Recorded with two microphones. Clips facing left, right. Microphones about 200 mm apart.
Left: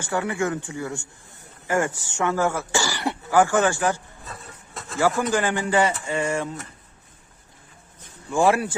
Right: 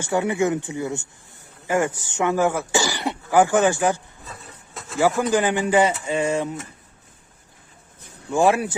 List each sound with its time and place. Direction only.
0.0 s speech: 20° right (ahead or behind)
4.3 s wood: centre (ahead or behind)
4.9 s speech: 15° right (ahead or behind)
8.3 s speech: 20° right (ahead or behind)